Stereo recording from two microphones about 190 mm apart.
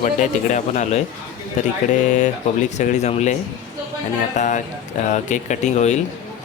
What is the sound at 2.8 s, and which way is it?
Speech, 40° left (ahead or behind).